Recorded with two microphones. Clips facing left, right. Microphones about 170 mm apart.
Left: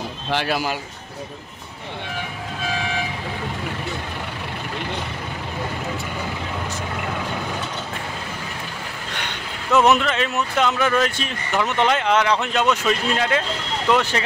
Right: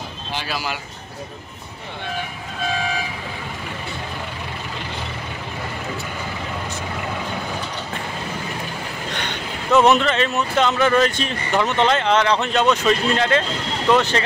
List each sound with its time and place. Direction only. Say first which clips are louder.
0.3 s speech: left 5 dB; 60° left (ahead or behind)
9.7 s speech: right 2 dB; 5° left (ahead or behind)